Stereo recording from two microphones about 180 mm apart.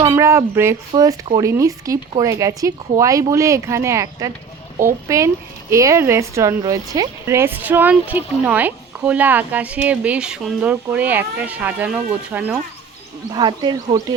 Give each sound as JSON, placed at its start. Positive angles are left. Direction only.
{"t": 0.1, "sound": "speech", "side_deg": -15}
{"t": 13.3, "sound": "speech", "side_deg": -25}